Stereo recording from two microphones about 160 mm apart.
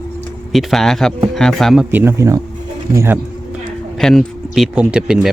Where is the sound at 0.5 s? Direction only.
Centre (ahead or behind); by 3.2 s 15° right (ahead or behind).